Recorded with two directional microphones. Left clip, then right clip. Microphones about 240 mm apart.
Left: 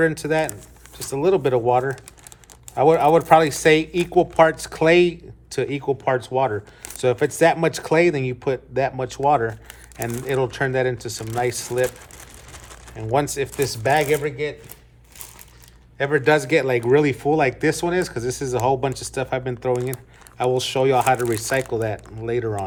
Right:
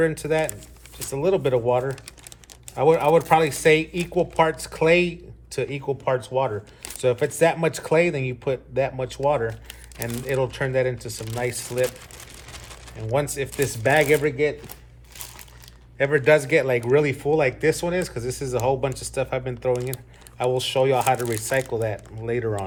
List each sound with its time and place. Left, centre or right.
0.0 s speech: centre
13.1 s speech: centre
14.2 s speech: centre
16.0 s speech: centre